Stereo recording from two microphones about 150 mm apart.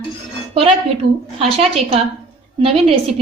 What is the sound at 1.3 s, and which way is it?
Speech, 40° right (ahead or behind).